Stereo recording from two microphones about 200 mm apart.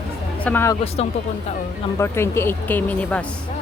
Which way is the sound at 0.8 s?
30° left (ahead or behind).